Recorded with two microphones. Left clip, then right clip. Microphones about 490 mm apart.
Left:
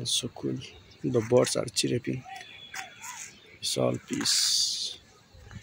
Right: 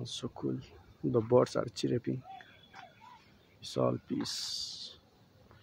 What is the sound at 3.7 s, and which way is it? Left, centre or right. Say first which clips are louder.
Speech: left 3 dB; right.